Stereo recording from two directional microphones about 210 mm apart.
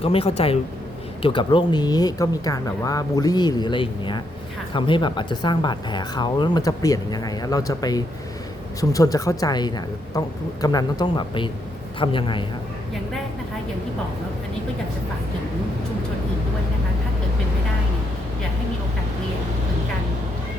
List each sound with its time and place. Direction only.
0.0 s a woman's voice: 25° left (ahead or behind)